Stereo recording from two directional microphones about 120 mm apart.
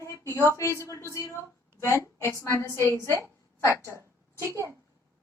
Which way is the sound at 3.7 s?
20° right (ahead or behind).